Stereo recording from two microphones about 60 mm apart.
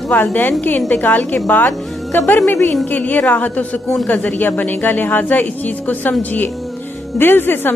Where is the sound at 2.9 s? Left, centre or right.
Left.